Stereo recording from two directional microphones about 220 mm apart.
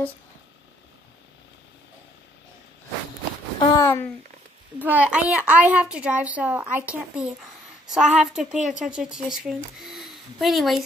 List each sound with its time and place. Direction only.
3.5 s speech: 20° left (ahead or behind)
4.7 s a woman's voice: 5° right (ahead or behind)